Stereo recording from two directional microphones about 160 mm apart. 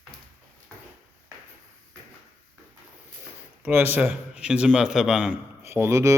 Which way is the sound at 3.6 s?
10° right (ahead or behind).